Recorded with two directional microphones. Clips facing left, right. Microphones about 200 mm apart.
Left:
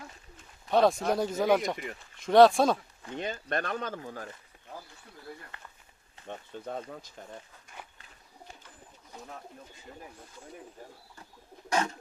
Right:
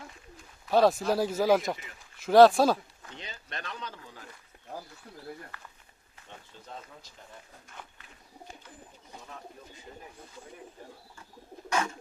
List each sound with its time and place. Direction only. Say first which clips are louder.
0.7 s speech: right 1 dB; 5° right (ahead or behind)
3.2 s speech: left 11 dB; 50° left (ahead or behind)
5.5 s speech: even; 25° left (ahead or behind)
6.2 s speech: left 9 dB; 55° left (ahead or behind)